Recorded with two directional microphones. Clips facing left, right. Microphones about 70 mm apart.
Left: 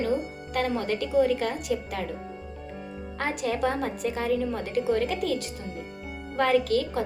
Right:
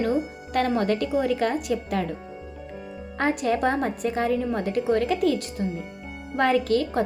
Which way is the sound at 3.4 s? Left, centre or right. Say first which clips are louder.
Right 1 dB; right.